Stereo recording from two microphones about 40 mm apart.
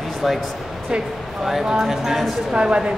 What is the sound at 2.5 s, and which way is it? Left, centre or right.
Speech, right.